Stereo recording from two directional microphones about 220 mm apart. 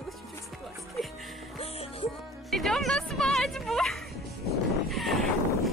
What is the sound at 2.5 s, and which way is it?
A woman's voice, centre (ahead or behind).